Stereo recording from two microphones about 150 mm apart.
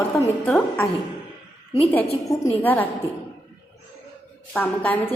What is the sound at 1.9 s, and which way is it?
Speech, 10° left (ahead or behind).